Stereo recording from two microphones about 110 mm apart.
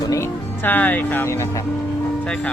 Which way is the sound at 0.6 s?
15° left (ahead or behind).